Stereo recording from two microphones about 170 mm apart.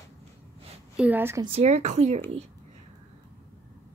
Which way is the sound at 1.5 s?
40° right (ahead or behind).